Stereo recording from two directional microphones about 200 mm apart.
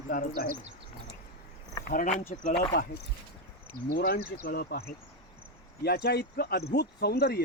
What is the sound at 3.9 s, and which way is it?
Speech, 45° left (ahead or behind).